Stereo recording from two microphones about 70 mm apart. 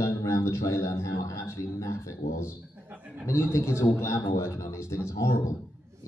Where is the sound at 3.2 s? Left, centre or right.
Left.